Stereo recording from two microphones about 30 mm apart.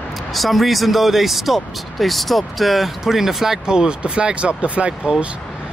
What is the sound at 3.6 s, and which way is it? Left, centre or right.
Speech, right.